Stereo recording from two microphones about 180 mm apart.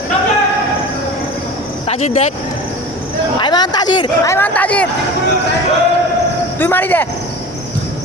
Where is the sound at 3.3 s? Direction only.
25° left (ahead or behind); by 4.9 s 5° left (ahead or behind).